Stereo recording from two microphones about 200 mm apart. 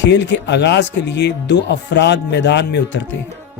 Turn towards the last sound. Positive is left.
turn(degrees=60)  # may be behind; listen again after turning